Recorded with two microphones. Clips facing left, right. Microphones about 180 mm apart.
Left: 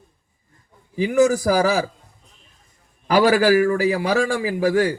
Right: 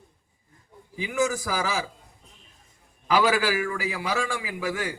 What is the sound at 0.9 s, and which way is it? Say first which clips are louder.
Speech: left 9 dB; 40° left (ahead or behind).